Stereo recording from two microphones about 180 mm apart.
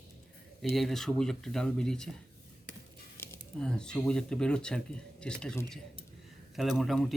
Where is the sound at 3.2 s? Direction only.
5° left (ahead or behind).